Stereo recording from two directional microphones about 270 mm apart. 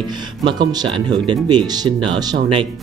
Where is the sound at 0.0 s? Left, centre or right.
Centre.